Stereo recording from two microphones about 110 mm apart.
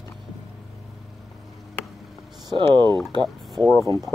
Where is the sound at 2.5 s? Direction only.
45° right (ahead or behind).